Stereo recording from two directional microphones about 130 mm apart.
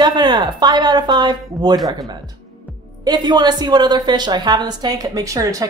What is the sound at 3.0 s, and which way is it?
Speech, 30° right (ahead or behind).